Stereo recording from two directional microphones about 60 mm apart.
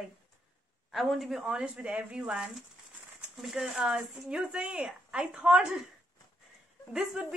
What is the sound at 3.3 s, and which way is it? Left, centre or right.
Speech, centre.